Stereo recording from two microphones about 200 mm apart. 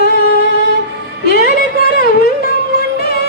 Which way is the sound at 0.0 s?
50° left (ahead or behind).